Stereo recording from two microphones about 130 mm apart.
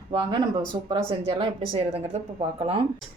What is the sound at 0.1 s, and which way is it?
Speech, 35° right (ahead or behind).